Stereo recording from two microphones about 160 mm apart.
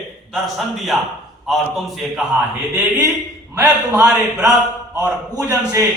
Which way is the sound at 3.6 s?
5° right (ahead or behind).